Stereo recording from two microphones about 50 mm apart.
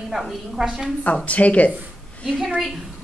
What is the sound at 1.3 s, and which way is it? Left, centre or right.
Speech, left.